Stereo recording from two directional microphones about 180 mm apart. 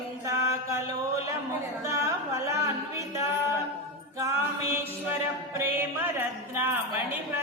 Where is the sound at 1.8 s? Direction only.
15° right (ahead or behind).